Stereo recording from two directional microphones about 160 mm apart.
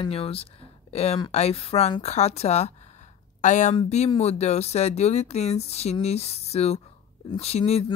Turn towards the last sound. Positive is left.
turn(degrees=40)  # may be behind; listen again after turning